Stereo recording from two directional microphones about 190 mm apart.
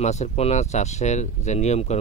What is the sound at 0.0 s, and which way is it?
Speech, 35° left (ahead or behind).